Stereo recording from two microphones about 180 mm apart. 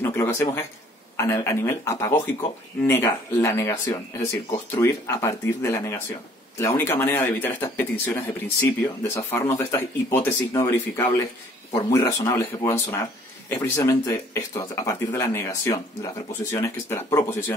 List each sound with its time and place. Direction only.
0.0 s speech: 15° left (ahead or behind)
11.7 s speech: 20° left (ahead or behind)